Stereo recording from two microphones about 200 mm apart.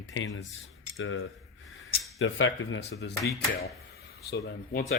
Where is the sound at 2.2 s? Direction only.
70° left (ahead or behind).